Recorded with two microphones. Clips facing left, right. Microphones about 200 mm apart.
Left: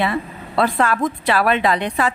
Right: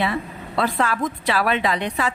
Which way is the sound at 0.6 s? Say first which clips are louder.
Left 4 dB; 55° left (ahead or behind).